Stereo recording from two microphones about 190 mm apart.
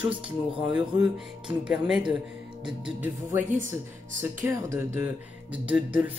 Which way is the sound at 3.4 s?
40° right (ahead or behind).